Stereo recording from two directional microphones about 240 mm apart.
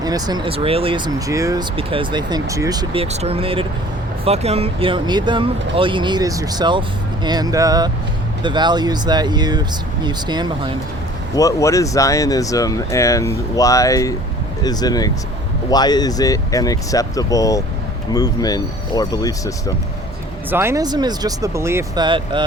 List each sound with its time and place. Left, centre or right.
0.0 s speech: centre
11.3 s speech: centre
20.5 s speech: centre